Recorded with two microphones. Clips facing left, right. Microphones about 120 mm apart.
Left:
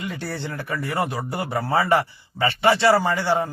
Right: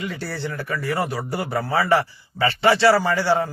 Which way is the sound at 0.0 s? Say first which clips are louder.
Right 1 dB; 20° left (ahead or behind).